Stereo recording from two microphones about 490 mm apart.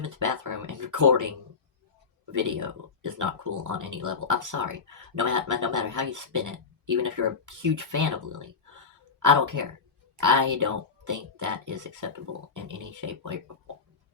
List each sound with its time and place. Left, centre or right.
0.0 s speech: right
2.3 s speech: right